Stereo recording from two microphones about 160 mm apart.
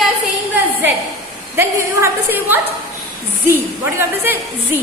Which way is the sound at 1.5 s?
15° right (ahead or behind).